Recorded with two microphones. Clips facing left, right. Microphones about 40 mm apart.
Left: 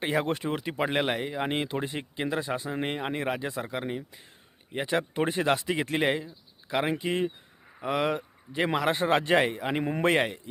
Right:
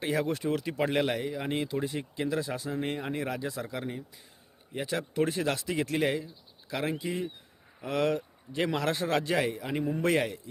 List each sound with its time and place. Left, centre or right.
0.0 s speech: left
7.0 s speech: left
7.8 s speech: left